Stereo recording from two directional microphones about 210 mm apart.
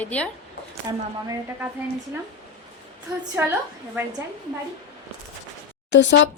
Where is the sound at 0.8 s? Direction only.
15° right (ahead or behind).